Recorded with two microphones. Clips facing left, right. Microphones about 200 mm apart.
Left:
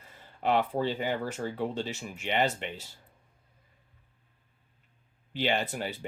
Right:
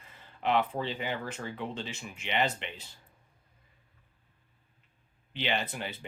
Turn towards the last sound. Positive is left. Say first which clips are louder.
# left 3 dB
turn(degrees=45)  # may be behind; listen again after turning